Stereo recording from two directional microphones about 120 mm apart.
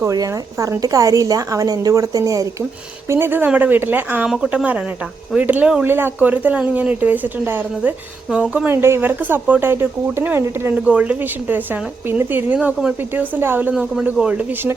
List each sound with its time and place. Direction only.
0.0 s a woman's voice: 30° right (ahead or behind)